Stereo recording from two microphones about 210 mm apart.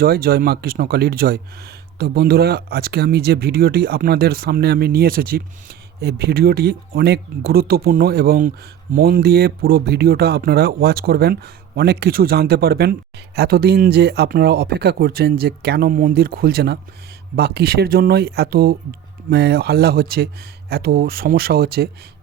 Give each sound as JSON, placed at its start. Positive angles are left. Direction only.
{"t": 0.0, "sound": "speech", "side_deg": -45}